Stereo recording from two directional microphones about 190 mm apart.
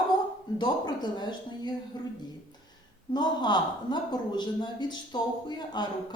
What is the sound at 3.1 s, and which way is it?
A man's voice, 20° left (ahead or behind).